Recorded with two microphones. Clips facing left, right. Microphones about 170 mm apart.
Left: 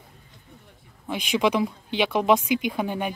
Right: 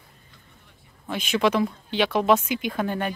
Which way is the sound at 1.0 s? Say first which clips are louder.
Even; 15° left (ahead or behind).